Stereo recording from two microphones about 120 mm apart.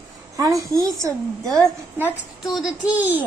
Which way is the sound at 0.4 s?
30° right (ahead or behind).